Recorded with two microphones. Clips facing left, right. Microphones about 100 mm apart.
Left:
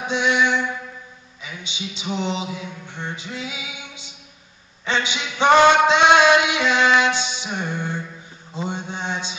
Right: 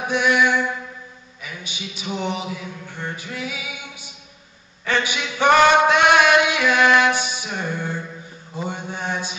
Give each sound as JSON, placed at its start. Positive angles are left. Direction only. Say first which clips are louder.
{"t": 0.1, "sound": "mantra", "louder": "right 1 dB", "side_deg": 20}
{"t": 1.4, "sound": "a sound", "louder": "left 1 dB", "side_deg": 20}
{"t": 8.6, "sound": "mantra", "louder": "even", "side_deg": 20}